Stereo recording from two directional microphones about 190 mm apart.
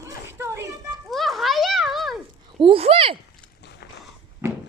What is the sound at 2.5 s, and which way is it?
Speech, 30° right (ahead or behind).